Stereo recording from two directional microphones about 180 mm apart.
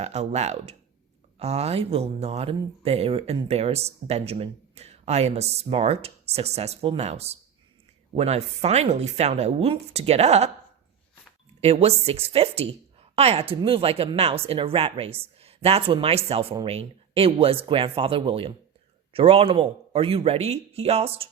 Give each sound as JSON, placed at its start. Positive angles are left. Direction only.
{"t": 0.0, "sound": "speech", "side_deg": -40}
{"t": 11.6, "sound": "speech", "side_deg": -35}